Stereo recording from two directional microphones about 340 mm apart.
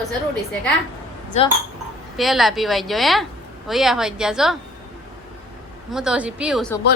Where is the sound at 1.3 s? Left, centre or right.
Centre.